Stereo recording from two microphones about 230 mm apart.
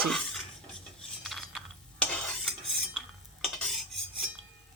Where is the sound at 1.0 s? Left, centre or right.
Centre.